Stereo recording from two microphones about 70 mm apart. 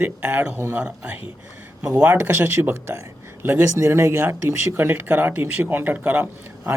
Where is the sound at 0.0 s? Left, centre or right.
Right.